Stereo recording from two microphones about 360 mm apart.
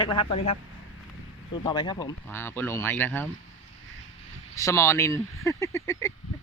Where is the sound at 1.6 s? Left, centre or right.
Centre.